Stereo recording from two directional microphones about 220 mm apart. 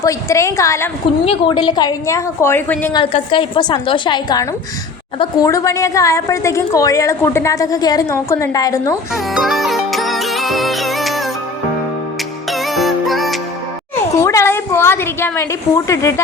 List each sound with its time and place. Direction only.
0.0 s a woman's voice: 15° left (ahead or behind)
1.2 s a woman's voice: 25° left (ahead or behind); by 2.9 s 10° left (ahead or behind)
2.9 s a woman's voice: 20° left (ahead or behind)
9.1 s music: centre (ahead or behind)
12.5 s music: centre (ahead or behind)
14.2 s a woman's voice: 15° left (ahead or behind)